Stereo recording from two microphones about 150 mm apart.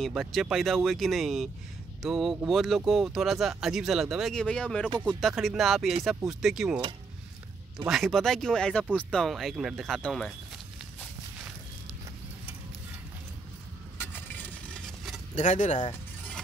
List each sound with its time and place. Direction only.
0.0 s speech: centre (ahead or behind)
7.9 s speech: centre (ahead or behind)
13.9 s a sound: 15° left (ahead or behind)
15.3 s speech: 55° left (ahead or behind)